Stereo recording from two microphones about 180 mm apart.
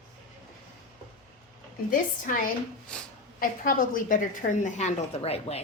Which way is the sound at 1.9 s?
50° left (ahead or behind).